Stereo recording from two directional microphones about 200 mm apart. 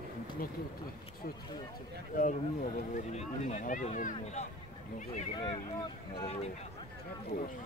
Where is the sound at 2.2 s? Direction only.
40° left (ahead or behind).